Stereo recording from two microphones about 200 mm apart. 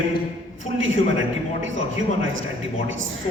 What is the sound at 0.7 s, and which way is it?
A man's voice, 70° right (ahead or behind).